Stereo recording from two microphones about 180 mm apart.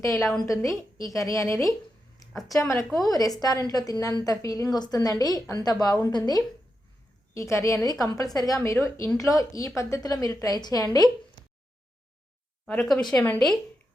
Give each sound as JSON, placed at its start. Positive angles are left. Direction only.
{"t": 0.2, "sound": "a woman's voice", "side_deg": 0}
{"t": 0.4, "sound": "a woman's voice", "side_deg": 20}
{"t": 12.6, "sound": "a woman's voice", "side_deg": 5}